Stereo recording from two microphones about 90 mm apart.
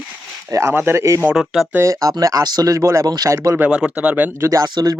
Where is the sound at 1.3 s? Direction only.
Centre (ahead or behind).